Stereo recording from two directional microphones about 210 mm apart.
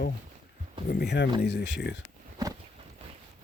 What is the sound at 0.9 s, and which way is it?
Speech, 50° left (ahead or behind).